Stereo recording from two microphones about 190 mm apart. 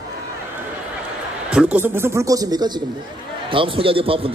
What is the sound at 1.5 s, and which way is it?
A man's voice, 5° right (ahead or behind).